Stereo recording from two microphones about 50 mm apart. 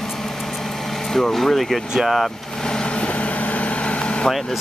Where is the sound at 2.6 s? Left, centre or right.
Centre.